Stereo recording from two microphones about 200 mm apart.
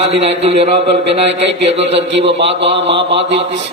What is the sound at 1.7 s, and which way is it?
Speech, 30° right (ahead or behind).